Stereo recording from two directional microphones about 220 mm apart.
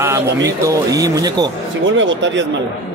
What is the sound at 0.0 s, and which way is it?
Speech, 15° right (ahead or behind).